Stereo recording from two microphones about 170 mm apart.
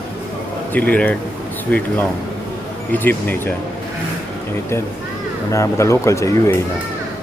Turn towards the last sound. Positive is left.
turn(degrees=15)  # may be behind; listen again after turning